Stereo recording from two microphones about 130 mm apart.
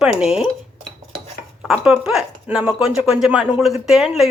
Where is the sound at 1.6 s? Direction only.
5° right (ahead or behind).